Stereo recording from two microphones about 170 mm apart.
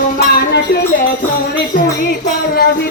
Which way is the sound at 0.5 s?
70° left (ahead or behind).